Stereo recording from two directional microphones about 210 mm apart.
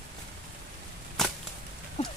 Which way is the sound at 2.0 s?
30° left (ahead or behind).